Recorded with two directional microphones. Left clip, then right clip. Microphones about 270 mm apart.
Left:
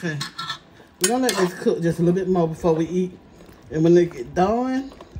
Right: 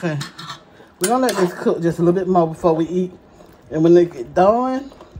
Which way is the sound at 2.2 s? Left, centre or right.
Right.